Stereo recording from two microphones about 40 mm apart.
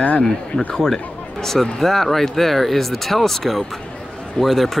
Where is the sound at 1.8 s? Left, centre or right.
Centre.